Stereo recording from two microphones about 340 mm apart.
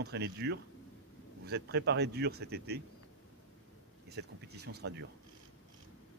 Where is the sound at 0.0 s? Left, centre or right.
Right.